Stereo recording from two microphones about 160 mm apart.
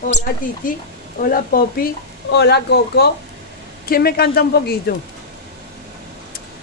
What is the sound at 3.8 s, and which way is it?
Speech, 70° left (ahead or behind).